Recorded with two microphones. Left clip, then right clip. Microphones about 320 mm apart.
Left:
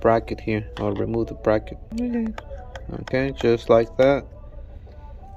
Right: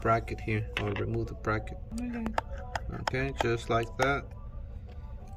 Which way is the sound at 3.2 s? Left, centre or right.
Centre.